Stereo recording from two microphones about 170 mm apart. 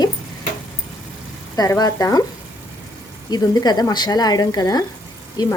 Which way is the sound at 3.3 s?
25° left (ahead or behind).